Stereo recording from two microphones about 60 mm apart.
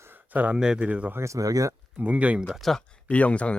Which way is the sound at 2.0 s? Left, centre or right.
Right.